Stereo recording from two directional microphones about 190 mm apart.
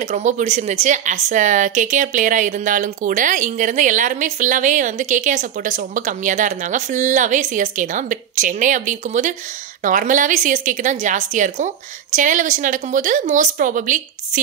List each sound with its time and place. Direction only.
0.0 s a woman's voice: 40° right (ahead or behind)